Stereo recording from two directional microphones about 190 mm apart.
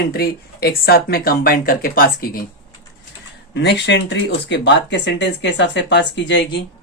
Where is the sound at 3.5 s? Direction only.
65° left (ahead or behind).